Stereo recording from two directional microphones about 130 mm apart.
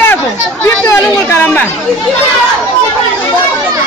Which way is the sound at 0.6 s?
20° left (ahead or behind).